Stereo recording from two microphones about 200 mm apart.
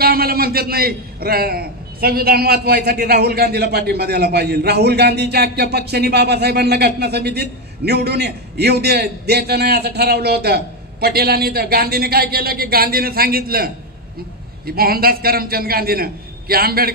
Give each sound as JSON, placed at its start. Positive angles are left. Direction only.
{"t": 0.0, "sound": "a man's voice", "side_deg": -50}
{"t": 14.7, "sound": "a man's voice", "side_deg": -50}